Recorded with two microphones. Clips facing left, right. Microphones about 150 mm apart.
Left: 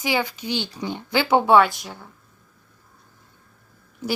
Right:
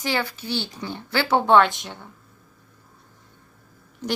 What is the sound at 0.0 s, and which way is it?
Speech, 15° left (ahead or behind).